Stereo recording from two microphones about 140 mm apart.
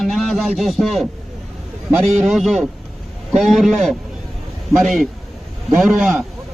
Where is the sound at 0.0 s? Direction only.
Centre (ahead or behind).